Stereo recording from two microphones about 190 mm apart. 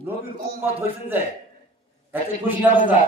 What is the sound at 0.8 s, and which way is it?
Speech, 10° right (ahead or behind).